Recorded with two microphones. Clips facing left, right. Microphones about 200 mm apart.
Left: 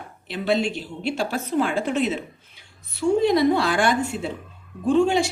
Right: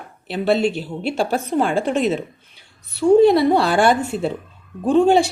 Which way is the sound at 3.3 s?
35° right (ahead or behind).